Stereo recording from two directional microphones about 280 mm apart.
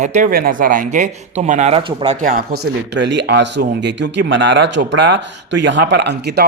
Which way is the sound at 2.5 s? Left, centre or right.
Right.